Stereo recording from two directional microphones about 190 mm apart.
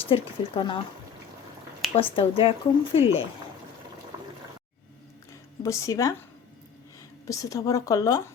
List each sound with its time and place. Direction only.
0.1 s speech: 25° left (ahead or behind)
2.0 s speech: 30° left (ahead or behind)
5.6 s a woman's voice: 15° left (ahead or behind)
7.3 s a woman's voice: 15° left (ahead or behind)